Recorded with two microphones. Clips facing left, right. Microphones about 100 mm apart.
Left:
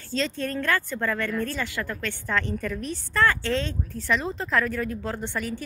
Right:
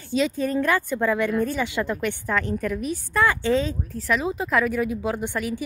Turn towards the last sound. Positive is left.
turn(degrees=-10)  # may be behind; listen again after turning